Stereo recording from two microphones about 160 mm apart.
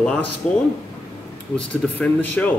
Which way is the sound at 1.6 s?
10° left (ahead or behind).